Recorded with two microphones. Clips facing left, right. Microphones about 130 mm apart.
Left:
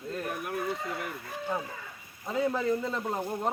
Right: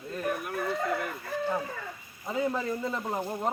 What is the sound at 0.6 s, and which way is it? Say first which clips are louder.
Chicken: right 7 dB; 60° right (ahead or behind).